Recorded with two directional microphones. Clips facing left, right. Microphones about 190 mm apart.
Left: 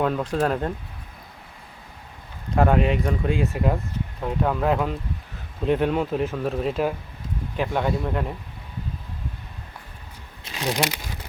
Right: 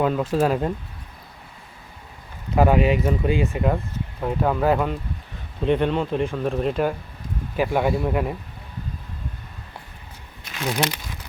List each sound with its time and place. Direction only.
0.0 s speech: 5° right (ahead or behind)
2.6 s speech: 5° right (ahead or behind)
10.6 s speech: 10° left (ahead or behind)